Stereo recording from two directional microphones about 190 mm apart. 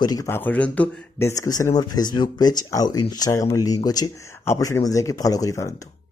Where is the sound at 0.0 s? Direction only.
20° left (ahead or behind).